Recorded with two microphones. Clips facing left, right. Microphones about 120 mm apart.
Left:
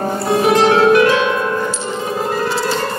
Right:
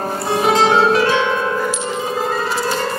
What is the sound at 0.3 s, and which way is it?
Music, 30° right (ahead or behind).